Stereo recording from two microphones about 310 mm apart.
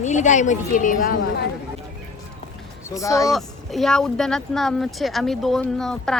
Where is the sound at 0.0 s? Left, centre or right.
Left.